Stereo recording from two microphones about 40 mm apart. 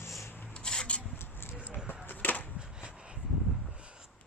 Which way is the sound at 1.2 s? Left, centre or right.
Left.